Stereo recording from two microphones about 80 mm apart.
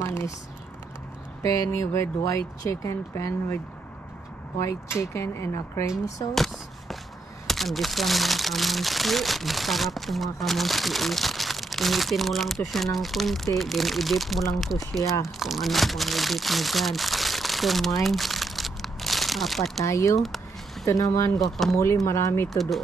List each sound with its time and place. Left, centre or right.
0.0 s a sound: left
1.4 s speech: left
4.6 s speech: left
6.3 s a sound: centre
7.4 s speech: centre
19.8 s speech: left
20.2 s speech: centre
20.8 s speech: left
21.5 s speech: centre
21.7 s speech: left
22.5 s speech: centre